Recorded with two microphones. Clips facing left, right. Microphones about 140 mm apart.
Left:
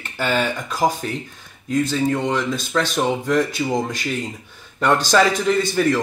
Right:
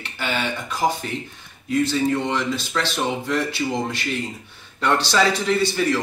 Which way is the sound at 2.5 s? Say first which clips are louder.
Left 4 dB; 45° left (ahead or behind).